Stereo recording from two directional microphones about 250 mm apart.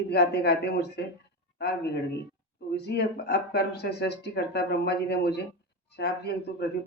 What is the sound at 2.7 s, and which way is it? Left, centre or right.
Speech, left.